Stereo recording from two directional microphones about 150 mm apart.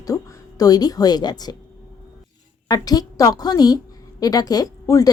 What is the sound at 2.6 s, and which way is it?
A woman's voice, 25° left (ahead or behind).